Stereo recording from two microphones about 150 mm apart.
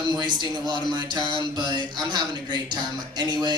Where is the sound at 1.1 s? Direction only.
30° left (ahead or behind).